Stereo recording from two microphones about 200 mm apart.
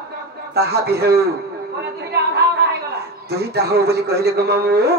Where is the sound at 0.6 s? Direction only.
55° right (ahead or behind).